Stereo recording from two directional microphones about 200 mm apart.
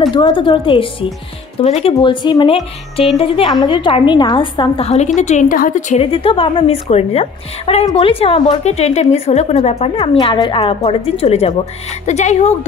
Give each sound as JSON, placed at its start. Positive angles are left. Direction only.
{"t": 0.1, "sound": "a woman's voice", "side_deg": 25}